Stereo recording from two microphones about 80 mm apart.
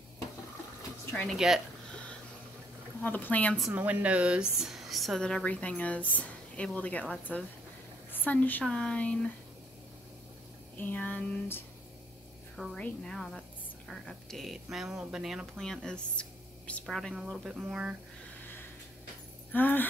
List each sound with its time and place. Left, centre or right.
1.3 s speech: centre
3.0 s a sound: left
3.7 s a woman's voice: right; by 9.3 s centre
10.8 s a sound: left
12.7 s speech: centre
13.1 s speech: centre
15.5 s speech: centre
17.1 s speech: centre
18.4 s a sound: left